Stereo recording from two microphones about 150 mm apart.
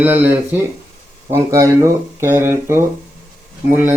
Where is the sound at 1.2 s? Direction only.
20° right (ahead or behind).